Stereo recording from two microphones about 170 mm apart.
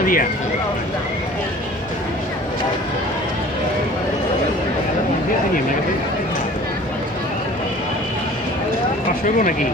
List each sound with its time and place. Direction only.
0.0 s speech: 55° left (ahead or behind)
9.2 s speech: 50° left (ahead or behind)